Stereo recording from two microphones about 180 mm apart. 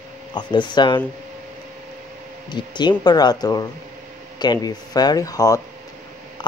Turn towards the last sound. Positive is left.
turn(degrees=20)  # may be behind; listen again after turning